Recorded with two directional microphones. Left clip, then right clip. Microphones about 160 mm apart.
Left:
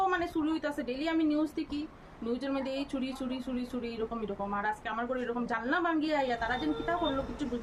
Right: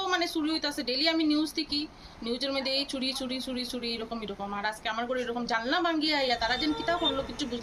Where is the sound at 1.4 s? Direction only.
40° left (ahead or behind).